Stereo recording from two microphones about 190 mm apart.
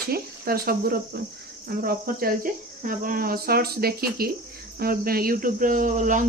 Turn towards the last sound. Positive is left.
turn(degrees=-40)  # may be behind; listen again after turning